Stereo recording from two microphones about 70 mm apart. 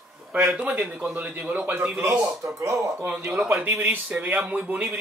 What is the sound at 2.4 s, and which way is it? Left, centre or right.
Speech, right.